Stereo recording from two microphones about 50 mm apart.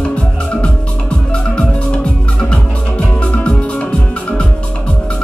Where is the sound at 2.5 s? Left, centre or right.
Left.